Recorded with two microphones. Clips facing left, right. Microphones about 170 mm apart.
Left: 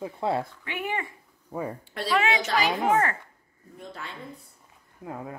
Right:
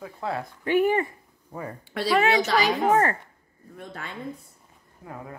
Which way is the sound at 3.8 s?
50° right (ahead or behind).